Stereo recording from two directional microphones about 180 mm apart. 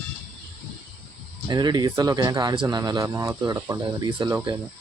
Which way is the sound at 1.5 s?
25° right (ahead or behind).